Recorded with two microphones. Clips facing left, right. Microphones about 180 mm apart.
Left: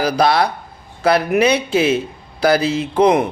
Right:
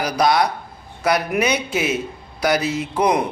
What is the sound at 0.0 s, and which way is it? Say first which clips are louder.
Speech: left 2 dB; 30° left (ahead or behind).